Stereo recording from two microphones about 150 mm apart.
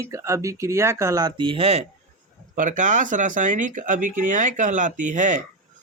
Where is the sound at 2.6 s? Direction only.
60° right (ahead or behind).